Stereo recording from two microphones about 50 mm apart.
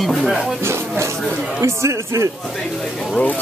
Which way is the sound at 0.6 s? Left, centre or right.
Right.